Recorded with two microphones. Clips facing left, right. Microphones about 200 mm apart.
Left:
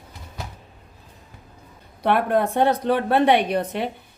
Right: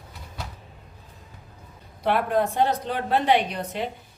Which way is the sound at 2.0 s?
60° left (ahead or behind).